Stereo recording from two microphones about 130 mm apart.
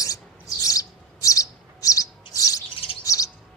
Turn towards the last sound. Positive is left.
turn(degrees=25)  # may be behind; listen again after turning